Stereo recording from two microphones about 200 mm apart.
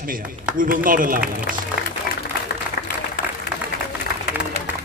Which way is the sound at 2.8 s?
50° left (ahead or behind).